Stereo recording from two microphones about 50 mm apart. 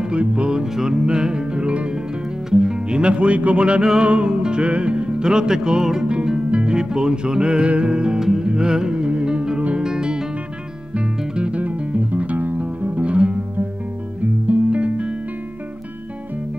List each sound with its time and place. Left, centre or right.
0.0 s music: right
8.2 s music: centre; by 13.4 s right
14.5 s music: right